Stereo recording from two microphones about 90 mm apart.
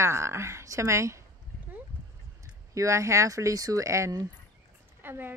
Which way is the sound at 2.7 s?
35° right (ahead or behind).